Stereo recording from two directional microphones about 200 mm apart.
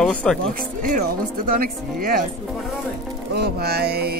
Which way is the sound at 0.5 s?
40° right (ahead or behind).